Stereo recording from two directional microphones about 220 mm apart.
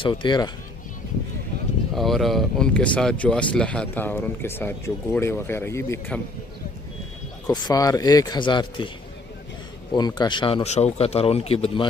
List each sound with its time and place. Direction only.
0.0 s speech: 20° left (ahead or behind)
2.0 s a man's voice: centre (ahead or behind)
7.4 s a man's voice: 15° left (ahead or behind)
9.9 s speech: 20° left (ahead or behind)